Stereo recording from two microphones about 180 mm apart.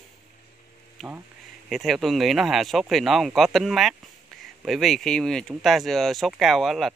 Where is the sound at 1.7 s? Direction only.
Centre (ahead or behind).